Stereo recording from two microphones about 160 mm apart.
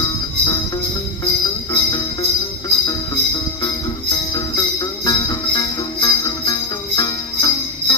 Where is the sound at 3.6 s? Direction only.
25° left (ahead or behind).